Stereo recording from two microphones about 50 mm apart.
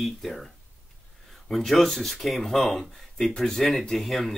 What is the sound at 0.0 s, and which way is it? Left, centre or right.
Speech, centre.